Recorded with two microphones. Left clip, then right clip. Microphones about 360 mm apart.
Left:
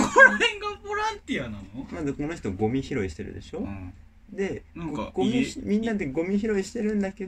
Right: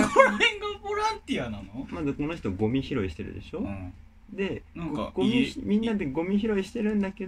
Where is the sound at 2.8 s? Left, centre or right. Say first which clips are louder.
Left 1 dB; centre.